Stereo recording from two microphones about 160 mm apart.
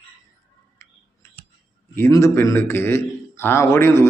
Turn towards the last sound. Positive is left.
turn(degrees=15)  # may be behind; listen again after turning